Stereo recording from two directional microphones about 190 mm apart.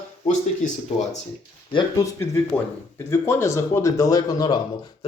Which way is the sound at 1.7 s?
15° left (ahead or behind).